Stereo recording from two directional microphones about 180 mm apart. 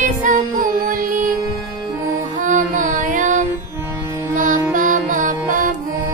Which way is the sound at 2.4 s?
45° right (ahead or behind).